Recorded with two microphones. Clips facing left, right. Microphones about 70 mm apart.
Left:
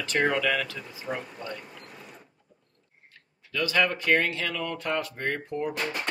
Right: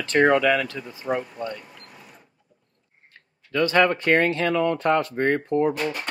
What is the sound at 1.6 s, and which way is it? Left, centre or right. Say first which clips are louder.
Mechanisms: left 1 dB; centre.